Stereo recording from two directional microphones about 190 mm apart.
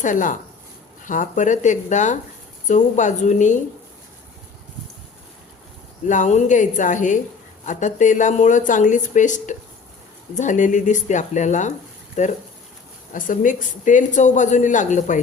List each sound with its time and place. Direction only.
0.0 s speech: 45° left (ahead or behind)
6.1 s speech: 40° left (ahead or behind)